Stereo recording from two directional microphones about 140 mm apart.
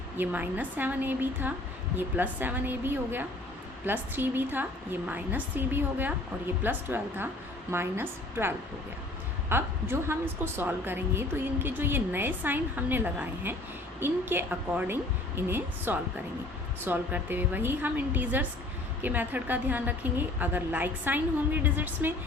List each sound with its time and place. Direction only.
0.2 s a woman's voice: 10° right (ahead or behind)